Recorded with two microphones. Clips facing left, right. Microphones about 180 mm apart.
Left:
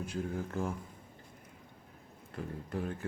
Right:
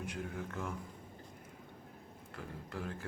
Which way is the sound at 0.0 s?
30° left (ahead or behind).